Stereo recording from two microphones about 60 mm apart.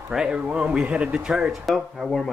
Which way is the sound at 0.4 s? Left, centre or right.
Right.